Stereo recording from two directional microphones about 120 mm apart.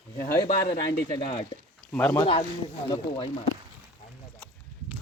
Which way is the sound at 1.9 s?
10° left (ahead or behind).